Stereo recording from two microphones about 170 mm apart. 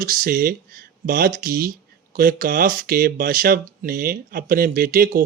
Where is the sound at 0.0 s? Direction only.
55° right (ahead or behind).